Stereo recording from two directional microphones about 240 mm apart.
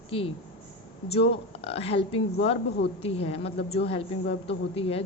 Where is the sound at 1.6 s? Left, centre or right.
Left.